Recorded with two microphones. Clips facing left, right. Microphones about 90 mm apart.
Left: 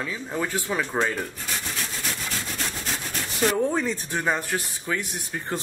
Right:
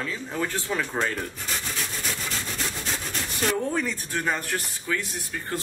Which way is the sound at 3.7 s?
25° left (ahead or behind).